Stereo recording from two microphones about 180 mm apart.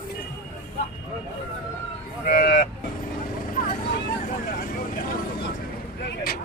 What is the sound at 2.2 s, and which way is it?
Speech, 55° left (ahead or behind).